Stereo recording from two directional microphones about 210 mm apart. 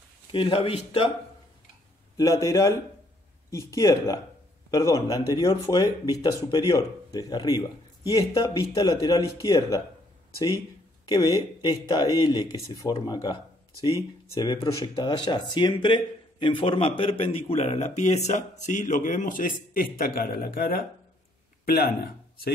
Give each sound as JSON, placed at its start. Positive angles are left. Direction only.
{"t": 0.3, "sound": "speech", "side_deg": 25}
{"t": 2.1, "sound": "speech", "side_deg": 15}
{"t": 11.1, "sound": "speech", "side_deg": 20}